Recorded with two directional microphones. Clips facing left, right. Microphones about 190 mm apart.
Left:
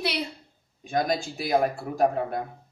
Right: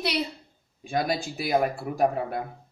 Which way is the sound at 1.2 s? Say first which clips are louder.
Left 1 dB; centre (ahead or behind).